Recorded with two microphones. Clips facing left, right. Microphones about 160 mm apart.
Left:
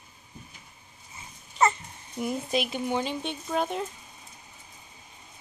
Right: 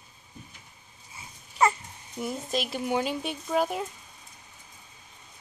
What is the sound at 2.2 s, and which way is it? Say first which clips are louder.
Speech: left 2 dB; centre (ahead or behind).